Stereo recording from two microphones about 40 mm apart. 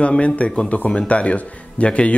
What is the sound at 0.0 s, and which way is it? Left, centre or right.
Speech, left.